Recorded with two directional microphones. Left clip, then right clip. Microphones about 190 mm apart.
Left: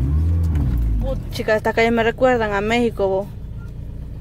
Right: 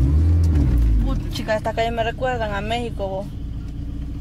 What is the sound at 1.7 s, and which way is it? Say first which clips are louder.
Speech: left 5 dB; 40° left (ahead or behind).